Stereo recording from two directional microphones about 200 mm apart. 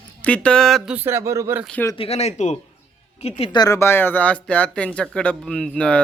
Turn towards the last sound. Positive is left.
turn(degrees=5)  # may be behind; listen again after turning